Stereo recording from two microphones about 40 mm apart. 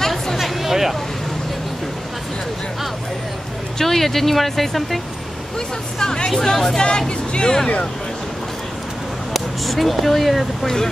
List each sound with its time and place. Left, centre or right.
0.0 s a sound: centre
3.7 s speech: centre
5.9 s speech: centre
6.8 s speech: left
9.3 s speech: centre